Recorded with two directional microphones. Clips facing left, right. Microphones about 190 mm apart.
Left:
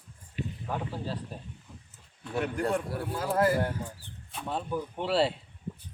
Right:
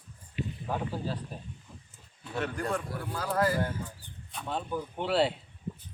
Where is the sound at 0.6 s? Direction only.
5° right (ahead or behind).